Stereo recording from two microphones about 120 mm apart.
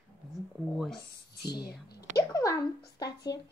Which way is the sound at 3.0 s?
30° left (ahead or behind).